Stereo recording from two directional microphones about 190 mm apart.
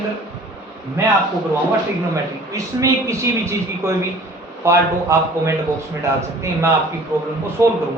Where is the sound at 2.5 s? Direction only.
15° right (ahead or behind).